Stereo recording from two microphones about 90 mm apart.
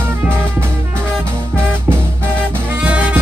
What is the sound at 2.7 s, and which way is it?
Music, 15° right (ahead or behind).